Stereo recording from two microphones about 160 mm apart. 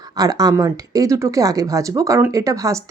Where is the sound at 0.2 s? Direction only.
25° right (ahead or behind).